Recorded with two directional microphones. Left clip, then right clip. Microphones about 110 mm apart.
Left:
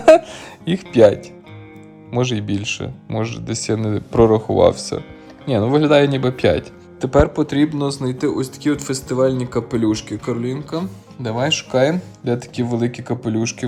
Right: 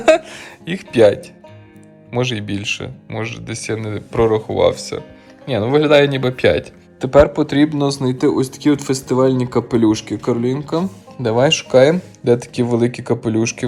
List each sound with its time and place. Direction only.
0.0 s music: 30° left (ahead or behind)
2.0 s speech: 30° left (ahead or behind)